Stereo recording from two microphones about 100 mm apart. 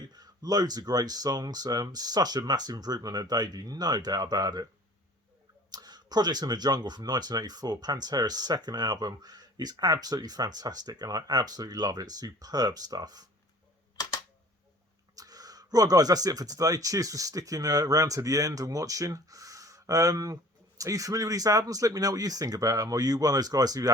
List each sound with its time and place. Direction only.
0.1 s speech: 40° right (ahead or behind)
5.7 s speech: 45° right (ahead or behind)
15.1 s speech: 40° right (ahead or behind)